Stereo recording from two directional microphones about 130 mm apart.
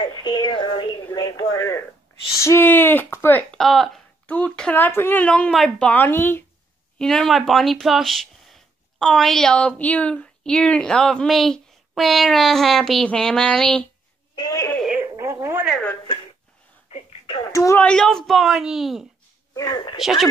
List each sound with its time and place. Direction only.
0.0 s a sound: 35° left (ahead or behind)
2.3 s a woman's voice: 20° left (ahead or behind)
3.5 s a woman's voice: centre (ahead or behind); by 6.4 s 15° left (ahead or behind)
7.0 s speech: 5° left (ahead or behind)
14.3 s a sound: 35° left (ahead or behind)
15.0 s telephone: 20° right (ahead or behind)
17.5 s speech: 25° left (ahead or behind)
17.7 s speech: 5° left (ahead or behind)
19.5 s speech: 25° left (ahead or behind)
20.0 s speech: centre (ahead or behind)